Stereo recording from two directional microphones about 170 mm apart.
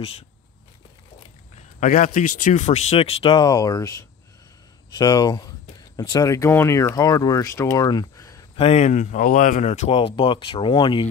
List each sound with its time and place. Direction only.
1.8 s speech: 50° left (ahead or behind); by 8.5 s 20° left (ahead or behind)
8.5 s speech: 40° left (ahead or behind)